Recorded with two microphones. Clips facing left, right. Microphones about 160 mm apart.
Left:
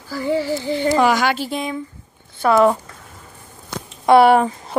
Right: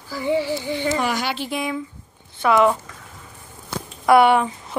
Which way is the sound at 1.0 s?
90° left.